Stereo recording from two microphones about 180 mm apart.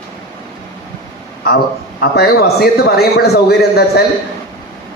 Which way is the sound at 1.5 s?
60° left (ahead or behind).